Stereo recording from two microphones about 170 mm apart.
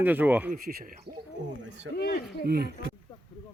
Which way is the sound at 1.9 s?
70° left (ahead or behind).